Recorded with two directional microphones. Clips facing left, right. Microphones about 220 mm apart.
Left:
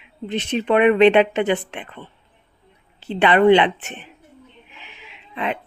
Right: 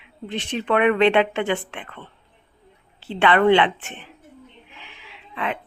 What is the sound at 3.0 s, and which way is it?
Speech, 20° left (ahead or behind).